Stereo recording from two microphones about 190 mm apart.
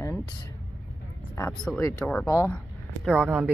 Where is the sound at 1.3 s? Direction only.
15° left (ahead or behind).